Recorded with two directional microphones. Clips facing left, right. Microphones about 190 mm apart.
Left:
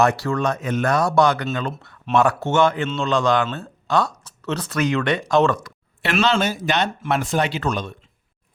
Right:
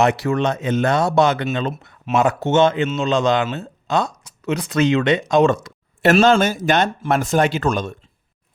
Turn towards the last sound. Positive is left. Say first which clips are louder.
# right 4 dB
turn(degrees=-45)  # may be behind; listen again after turning